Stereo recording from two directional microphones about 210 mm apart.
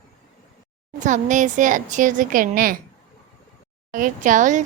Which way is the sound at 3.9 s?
40° right (ahead or behind).